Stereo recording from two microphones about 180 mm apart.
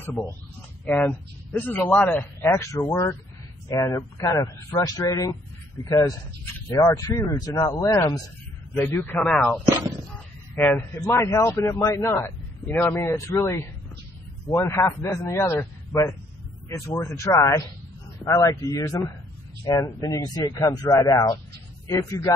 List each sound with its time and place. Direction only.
0.0 s a man's voice: 10° left (ahead or behind)
9.8 s speech: 20° right (ahead or behind)
11.1 s a man's voice: 15° left (ahead or behind)